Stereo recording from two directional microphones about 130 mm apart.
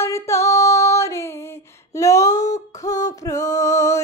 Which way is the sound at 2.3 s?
65° left (ahead or behind).